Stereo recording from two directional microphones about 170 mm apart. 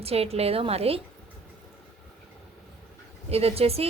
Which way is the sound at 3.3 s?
35° right (ahead or behind).